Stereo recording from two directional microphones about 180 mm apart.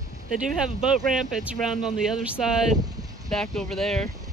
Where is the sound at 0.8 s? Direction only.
Centre (ahead or behind).